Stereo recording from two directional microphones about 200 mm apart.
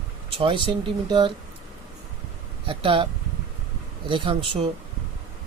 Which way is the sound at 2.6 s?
25° right (ahead or behind).